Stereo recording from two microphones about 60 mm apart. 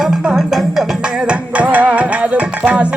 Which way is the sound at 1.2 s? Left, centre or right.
Right.